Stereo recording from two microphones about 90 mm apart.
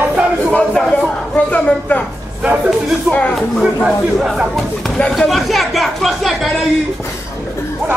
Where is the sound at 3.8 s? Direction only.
5° right (ahead or behind).